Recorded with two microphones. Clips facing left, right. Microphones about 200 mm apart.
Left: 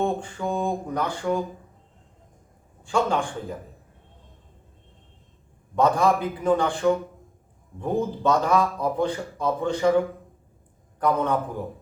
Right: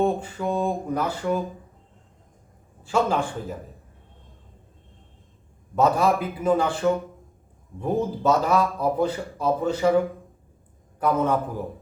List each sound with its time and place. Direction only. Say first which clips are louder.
0.0 s mantra: right 2 dB; 5° right (ahead or behind)
2.8 s mantra: right 1 dB; 5° right (ahead or behind)
5.7 s speech: even; 5° right (ahead or behind)
11.0 s speech: right 1 dB; 5° right (ahead or behind)